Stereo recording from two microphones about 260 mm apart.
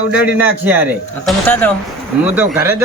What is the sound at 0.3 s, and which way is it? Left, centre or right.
Speech, centre.